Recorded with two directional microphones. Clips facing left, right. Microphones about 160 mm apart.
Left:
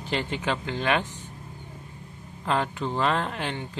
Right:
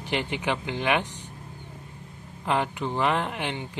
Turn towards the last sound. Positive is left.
turn(degrees=-15)  # may be behind; listen again after turning